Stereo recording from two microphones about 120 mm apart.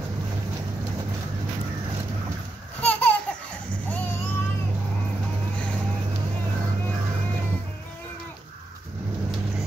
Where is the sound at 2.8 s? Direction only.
15° left (ahead or behind).